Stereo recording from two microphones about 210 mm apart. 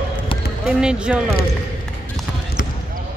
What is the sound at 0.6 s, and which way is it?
Basketball bounce, 5° right (ahead or behind).